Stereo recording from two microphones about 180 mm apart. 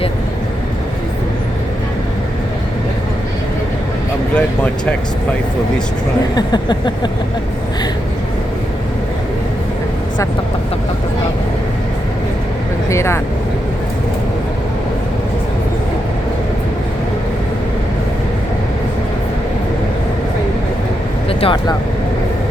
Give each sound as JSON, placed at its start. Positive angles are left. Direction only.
{"t": 4.4, "sound": "speech", "side_deg": 5}
{"t": 6.3, "sound": "a sound", "side_deg": 25}
{"t": 12.9, "sound": "speech", "side_deg": 15}
{"t": 21.2, "sound": "vehicle", "side_deg": 30}